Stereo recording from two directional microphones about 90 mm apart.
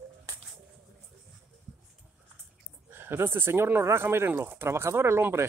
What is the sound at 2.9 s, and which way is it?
Speech, 25° right (ahead or behind).